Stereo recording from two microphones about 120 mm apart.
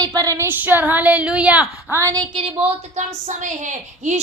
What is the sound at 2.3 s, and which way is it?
Speech, 50° right (ahead or behind).